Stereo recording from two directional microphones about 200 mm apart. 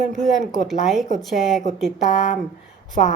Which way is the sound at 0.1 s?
Centre (ahead or behind).